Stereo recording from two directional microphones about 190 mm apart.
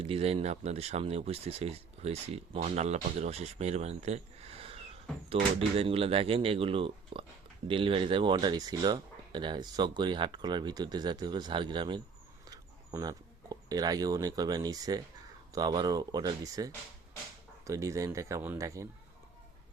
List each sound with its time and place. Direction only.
0.0 s speech: 30° right (ahead or behind)